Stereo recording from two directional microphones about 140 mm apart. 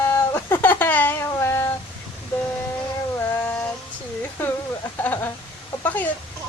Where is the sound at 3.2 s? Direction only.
10° left (ahead or behind).